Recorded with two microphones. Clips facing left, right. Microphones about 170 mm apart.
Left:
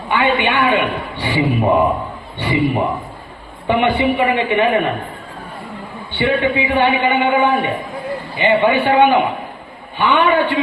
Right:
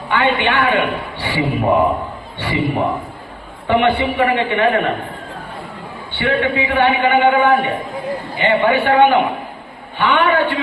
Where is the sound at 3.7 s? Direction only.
15° left (ahead or behind).